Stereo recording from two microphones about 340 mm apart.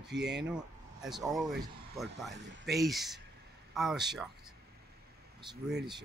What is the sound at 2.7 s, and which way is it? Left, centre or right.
Speech, centre.